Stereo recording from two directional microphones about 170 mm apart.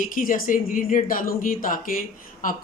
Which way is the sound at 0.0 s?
50° left (ahead or behind).